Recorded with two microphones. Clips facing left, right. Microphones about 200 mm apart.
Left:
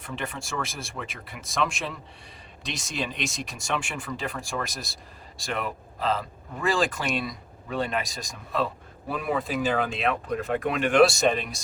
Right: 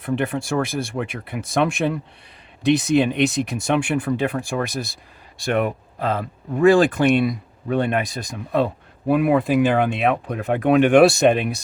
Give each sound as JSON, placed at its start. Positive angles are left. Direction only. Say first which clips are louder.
{"t": 0.0, "sound": "speech", "louder": "right 12 dB", "side_deg": -55}